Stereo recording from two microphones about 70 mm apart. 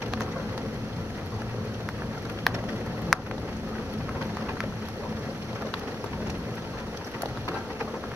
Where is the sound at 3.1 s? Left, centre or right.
Centre.